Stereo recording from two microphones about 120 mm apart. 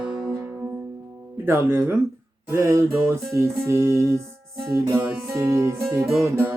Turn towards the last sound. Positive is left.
turn(degrees=-20)  # may be behind; listen again after turning